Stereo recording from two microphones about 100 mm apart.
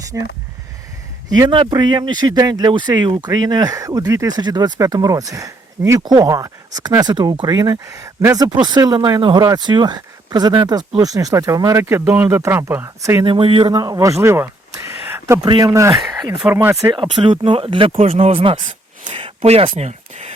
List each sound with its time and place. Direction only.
0.1 s speech: 25° right (ahead or behind)
1.5 s speech: 50° right (ahead or behind); by 13.2 s 25° right (ahead or behind)
13.2 s speech: 60° right (ahead or behind)
13.7 s speech: 35° right (ahead or behind)
15.4 s speech: 50° right (ahead or behind)
15.7 s speech: 30° right (ahead or behind)
16.1 s speech: 45° right (ahead or behind)
16.5 s speech: 20° right (ahead or behind)
16.9 s speech: 55° right (ahead or behind); by 20.3 s 90° right